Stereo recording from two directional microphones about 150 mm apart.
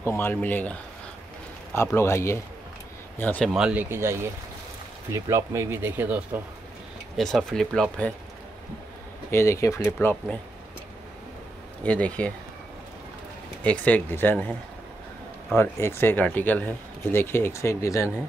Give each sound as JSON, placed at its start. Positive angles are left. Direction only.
{"t": 0.0, "sound": "speech", "side_deg": 15}
{"t": 3.4, "sound": "speech", "side_deg": -5}
{"t": 7.2, "sound": "speech", "side_deg": 0}
{"t": 9.3, "sound": "speech", "side_deg": 20}
{"t": 11.8, "sound": "speech", "side_deg": 10}
{"t": 13.7, "sound": "speech", "side_deg": 10}